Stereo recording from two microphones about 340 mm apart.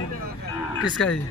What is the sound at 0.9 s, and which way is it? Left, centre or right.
Speech, centre.